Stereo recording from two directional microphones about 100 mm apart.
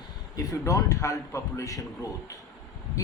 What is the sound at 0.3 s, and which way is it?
A man's voice, 35° left (ahead or behind).